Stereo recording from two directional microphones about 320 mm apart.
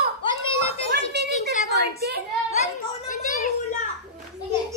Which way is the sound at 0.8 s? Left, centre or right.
Right.